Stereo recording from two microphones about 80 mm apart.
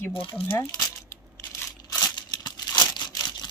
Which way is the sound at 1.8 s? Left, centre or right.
Left.